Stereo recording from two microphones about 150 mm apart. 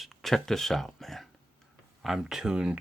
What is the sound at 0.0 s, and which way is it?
Speech, centre (ahead or behind).